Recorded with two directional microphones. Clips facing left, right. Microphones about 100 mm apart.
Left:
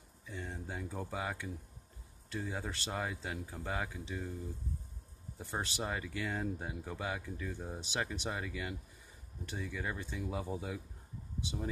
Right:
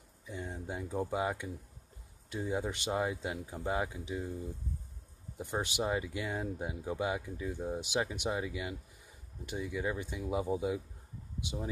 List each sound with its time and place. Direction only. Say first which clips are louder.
0.3 s speech: right 3 dB; 15° right (ahead or behind)
5.4 s speech: right 4 dB; 15° right (ahead or behind)